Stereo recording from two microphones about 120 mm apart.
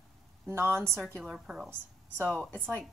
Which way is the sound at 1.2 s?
5° right (ahead or behind).